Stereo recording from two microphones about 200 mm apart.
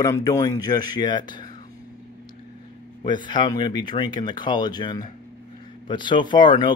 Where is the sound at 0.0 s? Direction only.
15° left (ahead or behind).